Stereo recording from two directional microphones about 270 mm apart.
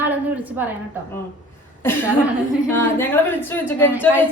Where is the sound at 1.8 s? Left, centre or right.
Centre.